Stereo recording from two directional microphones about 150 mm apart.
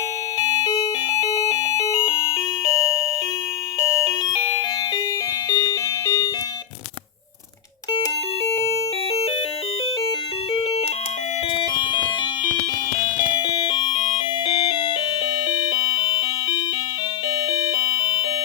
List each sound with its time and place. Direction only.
0.8 s doorbell: 20° left (ahead or behind)
5.5 s a sound: 25° left (ahead or behind)
11.5 s music: 30° left (ahead or behind)
13.4 s music: 30° left (ahead or behind)
17.5 s doorbell: 30° left (ahead or behind)